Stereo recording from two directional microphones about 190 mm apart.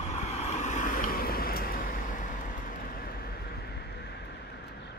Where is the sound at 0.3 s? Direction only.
35° left (ahead or behind); by 4.7 s 60° left (ahead or behind).